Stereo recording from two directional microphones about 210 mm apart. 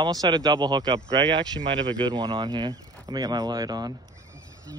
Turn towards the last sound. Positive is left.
turn(degrees=-20)  # may be behind; listen again after turning